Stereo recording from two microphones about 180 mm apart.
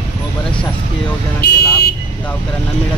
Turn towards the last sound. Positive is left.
turn(degrees=65)  # may be behind; listen again after turning